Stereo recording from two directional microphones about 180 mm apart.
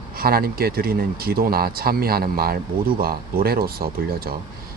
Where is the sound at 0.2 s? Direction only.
55° right (ahead or behind).